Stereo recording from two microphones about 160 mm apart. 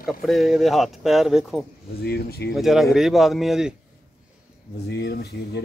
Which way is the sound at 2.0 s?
80° left.